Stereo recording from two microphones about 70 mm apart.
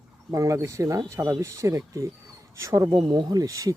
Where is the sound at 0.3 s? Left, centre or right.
Right.